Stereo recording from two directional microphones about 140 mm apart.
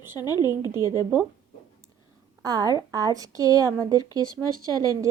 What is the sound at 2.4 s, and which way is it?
A woman's voice, 25° right (ahead or behind).